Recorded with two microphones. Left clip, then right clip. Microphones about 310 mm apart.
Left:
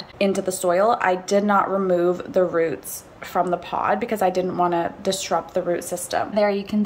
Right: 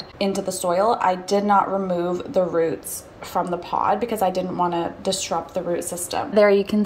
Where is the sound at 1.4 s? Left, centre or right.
Left.